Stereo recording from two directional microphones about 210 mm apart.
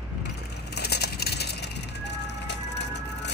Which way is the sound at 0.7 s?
50° left (ahead or behind).